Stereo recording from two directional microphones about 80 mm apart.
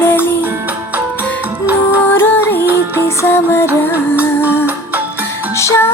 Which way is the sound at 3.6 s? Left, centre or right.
Right.